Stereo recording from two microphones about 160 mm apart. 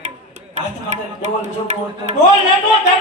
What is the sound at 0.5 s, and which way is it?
Speech, 45° right (ahead or behind).